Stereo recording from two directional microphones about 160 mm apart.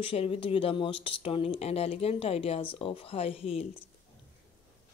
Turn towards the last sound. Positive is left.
turn(degrees=35)  # may be behind; listen again after turning